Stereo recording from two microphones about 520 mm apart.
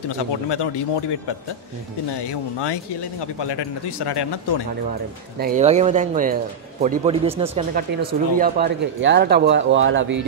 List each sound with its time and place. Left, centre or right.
0.1 s a man's voice: left
2.2 s a man's voice: left
5.4 s speech: centre